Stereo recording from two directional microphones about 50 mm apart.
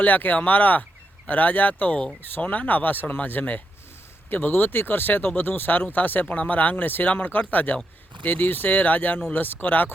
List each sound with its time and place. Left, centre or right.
0.0 s speech: left